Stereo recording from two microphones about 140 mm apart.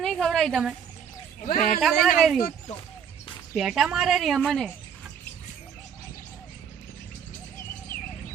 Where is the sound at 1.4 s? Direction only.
70° left (ahead or behind).